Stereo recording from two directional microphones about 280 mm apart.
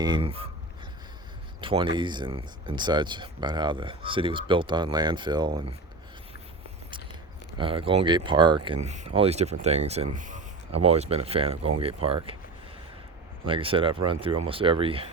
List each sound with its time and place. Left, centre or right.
0.0 s speech: centre
1.6 s speech: centre
7.6 s speech: centre
10.2 s a sound: right
10.8 s speech: right
13.4 s speech: centre